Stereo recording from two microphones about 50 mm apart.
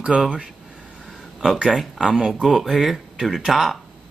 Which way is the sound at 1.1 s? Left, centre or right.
Centre.